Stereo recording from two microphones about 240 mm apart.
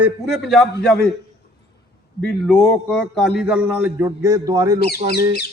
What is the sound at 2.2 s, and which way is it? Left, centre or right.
A man's voice, centre.